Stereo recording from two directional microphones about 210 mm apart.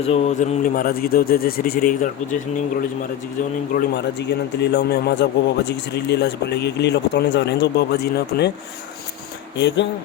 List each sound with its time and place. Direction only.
0.0 s a man's voice: 30° left (ahead or behind)
3.8 s a man's voice: 55° left (ahead or behind)
9.6 s speech: 55° left (ahead or behind)